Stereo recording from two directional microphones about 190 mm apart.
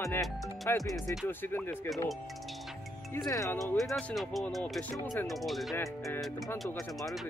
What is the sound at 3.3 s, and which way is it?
Speech, 15° left (ahead or behind).